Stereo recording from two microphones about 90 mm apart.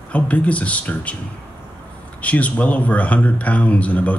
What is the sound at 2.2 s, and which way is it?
Speech, 15° left (ahead or behind).